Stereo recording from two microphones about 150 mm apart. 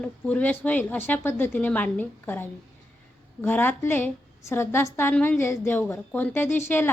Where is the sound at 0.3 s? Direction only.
10° left (ahead or behind).